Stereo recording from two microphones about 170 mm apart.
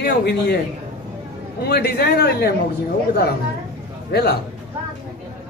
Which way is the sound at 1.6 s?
70° left (ahead or behind).